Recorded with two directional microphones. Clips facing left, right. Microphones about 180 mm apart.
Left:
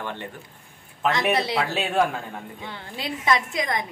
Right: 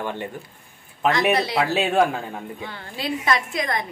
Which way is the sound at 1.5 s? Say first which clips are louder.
Right 3 dB; 5° right (ahead or behind).